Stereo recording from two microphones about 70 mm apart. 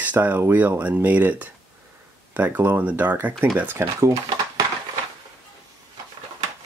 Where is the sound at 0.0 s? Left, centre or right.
Right.